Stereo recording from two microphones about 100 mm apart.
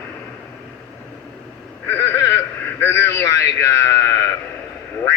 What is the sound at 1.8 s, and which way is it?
A man's voice, 25° left (ahead or behind).